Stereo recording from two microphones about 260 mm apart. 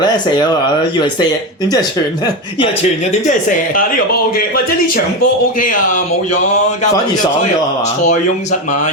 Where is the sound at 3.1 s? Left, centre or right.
Left.